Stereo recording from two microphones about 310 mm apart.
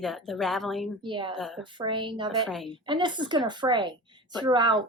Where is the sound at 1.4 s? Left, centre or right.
Centre.